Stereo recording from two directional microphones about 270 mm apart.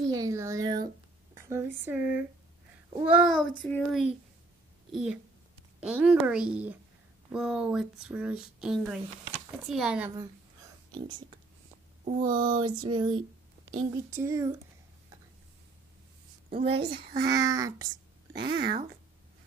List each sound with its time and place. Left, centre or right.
0.1 s female singing: centre
1.3 s speech: centre
11.1 s female singing: centre
12.0 s speech: right
12.4 s female singing: centre
16.6 s a child's voice: right
16.9 s speech: right
17.3 s female singing: centre
18.3 s speech: right